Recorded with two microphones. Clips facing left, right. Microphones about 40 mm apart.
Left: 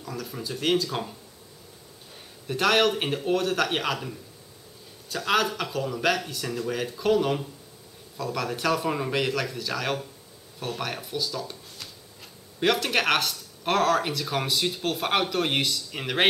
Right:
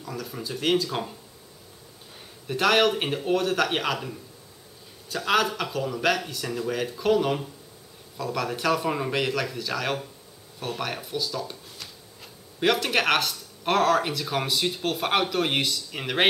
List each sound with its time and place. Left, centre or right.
0.0 s speech: centre
2.1 s speech: centre